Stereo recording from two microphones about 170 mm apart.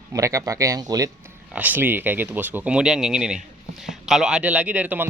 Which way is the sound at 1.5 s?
10° right (ahead or behind).